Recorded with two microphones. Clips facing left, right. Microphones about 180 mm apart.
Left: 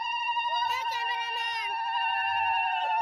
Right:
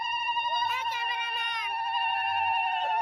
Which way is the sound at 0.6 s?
40° left (ahead or behind).